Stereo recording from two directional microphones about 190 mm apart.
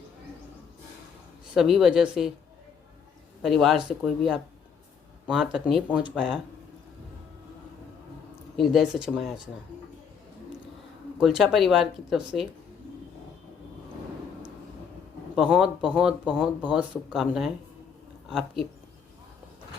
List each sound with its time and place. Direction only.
1.5 s speech: centre (ahead or behind)
3.4 s speech: centre (ahead or behind)
8.5 s speech: centre (ahead or behind)
11.2 s speech: centre (ahead or behind)
15.4 s speech: 5° right (ahead or behind)